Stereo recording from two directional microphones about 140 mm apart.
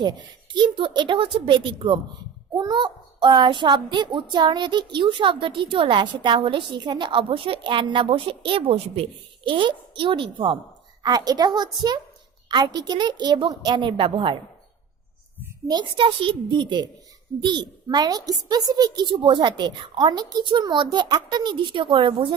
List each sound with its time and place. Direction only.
0.5 s child singing: 35° right (ahead or behind)
11.0 s a woman's voice: 30° right (ahead or behind)
12.5 s child singing: 30° right (ahead or behind)
15.6 s child singing: 30° right (ahead or behind)